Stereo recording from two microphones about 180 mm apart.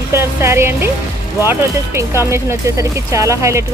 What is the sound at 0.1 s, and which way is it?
Speech, 15° right (ahead or behind).